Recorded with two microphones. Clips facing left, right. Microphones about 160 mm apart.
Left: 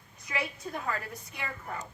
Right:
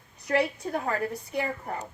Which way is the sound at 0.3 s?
60° right (ahead or behind).